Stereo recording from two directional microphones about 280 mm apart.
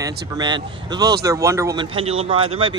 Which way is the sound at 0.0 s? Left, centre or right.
Centre.